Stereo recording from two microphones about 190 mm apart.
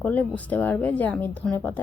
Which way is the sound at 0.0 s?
10° left (ahead or behind).